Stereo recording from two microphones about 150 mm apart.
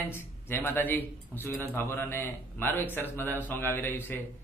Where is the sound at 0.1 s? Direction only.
15° left (ahead or behind).